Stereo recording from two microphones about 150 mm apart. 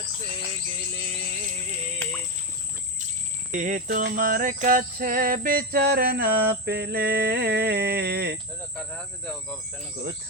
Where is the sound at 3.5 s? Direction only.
60° right (ahead or behind); by 8.4 s 90° right.